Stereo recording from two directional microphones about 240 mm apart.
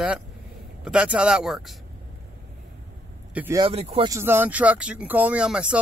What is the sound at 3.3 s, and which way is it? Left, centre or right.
Speech, centre.